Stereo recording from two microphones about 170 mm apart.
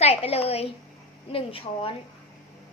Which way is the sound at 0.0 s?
35° left (ahead or behind).